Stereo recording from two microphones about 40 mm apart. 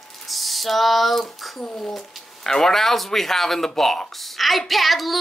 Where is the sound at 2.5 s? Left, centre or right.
Centre.